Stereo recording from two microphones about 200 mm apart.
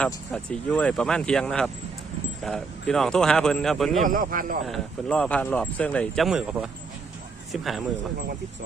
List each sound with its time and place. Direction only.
0.0 s speech: 5° left (ahead or behind)
4.0 s speech: 40° right (ahead or behind)
4.6 s speech: centre (ahead or behind)